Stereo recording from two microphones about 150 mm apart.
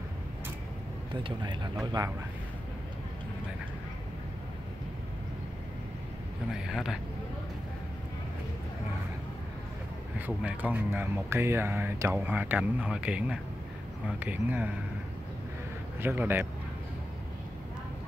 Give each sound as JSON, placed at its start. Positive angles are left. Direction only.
{"t": 1.2, "sound": "speech", "side_deg": -30}
{"t": 6.5, "sound": "speech", "side_deg": -5}
{"t": 10.1, "sound": "speech", "side_deg": -10}
{"t": 16.0, "sound": "speech", "side_deg": -15}